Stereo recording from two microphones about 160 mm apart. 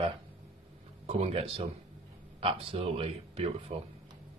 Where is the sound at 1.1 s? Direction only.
40° right (ahead or behind).